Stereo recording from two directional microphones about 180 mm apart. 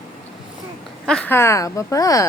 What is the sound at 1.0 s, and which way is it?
Speech, 5° left (ahead or behind).